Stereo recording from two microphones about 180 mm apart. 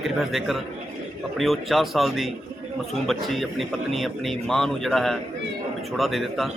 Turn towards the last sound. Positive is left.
turn(degrees=0)  # may be behind; listen again after turning